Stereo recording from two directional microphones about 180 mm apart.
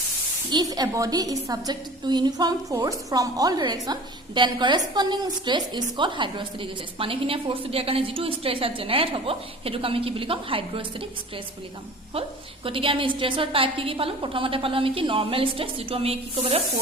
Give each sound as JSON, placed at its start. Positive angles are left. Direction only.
{"t": 0.5, "sound": "a woman's voice", "side_deg": -20}
{"t": 12.6, "sound": "a woman's voice", "side_deg": -30}